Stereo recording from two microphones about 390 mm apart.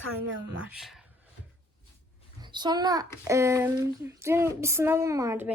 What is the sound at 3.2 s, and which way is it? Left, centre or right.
Female singing, centre.